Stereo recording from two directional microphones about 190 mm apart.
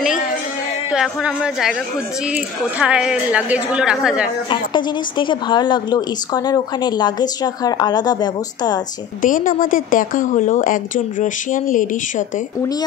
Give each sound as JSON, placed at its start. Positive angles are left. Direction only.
{"t": 0.9, "sound": "a woman's voice", "side_deg": -5}
{"t": 4.5, "sound": "speech", "side_deg": 25}
{"t": 9.2, "sound": "speech", "side_deg": 45}